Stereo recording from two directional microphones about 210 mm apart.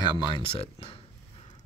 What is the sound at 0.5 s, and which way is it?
Speech, 25° left (ahead or behind).